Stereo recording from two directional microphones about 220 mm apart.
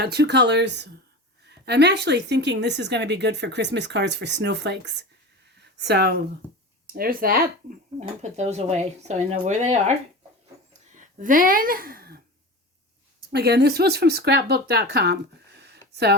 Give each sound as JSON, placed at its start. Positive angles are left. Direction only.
{"t": 0.0, "sound": "a woman's voice", "side_deg": -50}
{"t": 5.5, "sound": "a sound", "side_deg": -50}
{"t": 6.8, "sound": "speech", "side_deg": -40}
{"t": 10.9, "sound": "speech", "side_deg": -35}
{"t": 13.3, "sound": "a woman's voice", "side_deg": -50}